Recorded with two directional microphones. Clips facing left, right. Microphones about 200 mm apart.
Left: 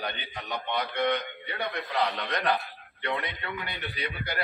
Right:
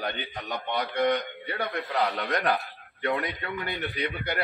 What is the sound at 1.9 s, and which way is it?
A man's voice, 40° right (ahead or behind).